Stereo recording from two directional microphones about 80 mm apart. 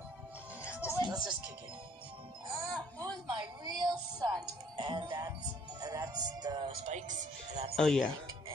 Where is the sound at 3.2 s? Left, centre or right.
Right.